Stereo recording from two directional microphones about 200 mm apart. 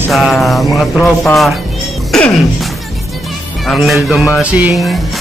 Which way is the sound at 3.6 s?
Centre (ahead or behind).